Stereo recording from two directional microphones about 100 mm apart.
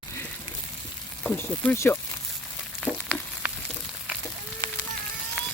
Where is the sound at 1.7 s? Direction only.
25° left (ahead or behind).